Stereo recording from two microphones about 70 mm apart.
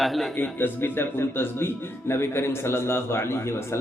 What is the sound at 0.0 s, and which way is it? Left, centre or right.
Speech, centre.